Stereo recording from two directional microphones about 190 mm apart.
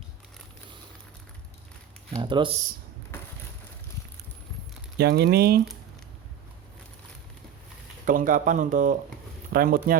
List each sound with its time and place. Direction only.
2.1 s speech: 25° right (ahead or behind)
4.9 s speech: 60° right (ahead or behind)
8.0 s speech: 45° right (ahead or behind)